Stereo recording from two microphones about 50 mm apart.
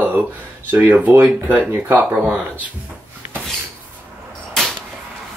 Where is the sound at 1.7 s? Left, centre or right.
Right.